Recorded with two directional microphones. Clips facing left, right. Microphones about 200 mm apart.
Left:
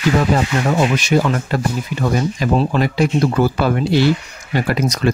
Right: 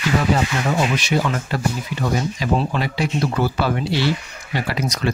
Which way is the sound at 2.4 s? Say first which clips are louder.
Left 5 dB; 50° left (ahead or behind).